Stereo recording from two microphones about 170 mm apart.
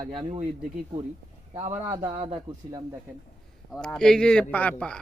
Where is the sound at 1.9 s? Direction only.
30° right (ahead or behind).